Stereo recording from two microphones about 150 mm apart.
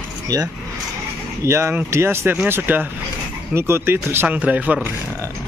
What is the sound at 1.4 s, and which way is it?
Speech, 15° right (ahead or behind).